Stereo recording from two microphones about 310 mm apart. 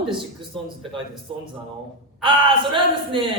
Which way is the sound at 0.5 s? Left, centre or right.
Centre.